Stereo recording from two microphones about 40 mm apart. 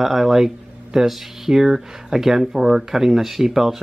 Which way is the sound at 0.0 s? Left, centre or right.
Centre.